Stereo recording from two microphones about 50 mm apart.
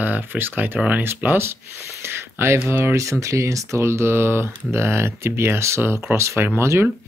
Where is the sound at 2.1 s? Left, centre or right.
Right.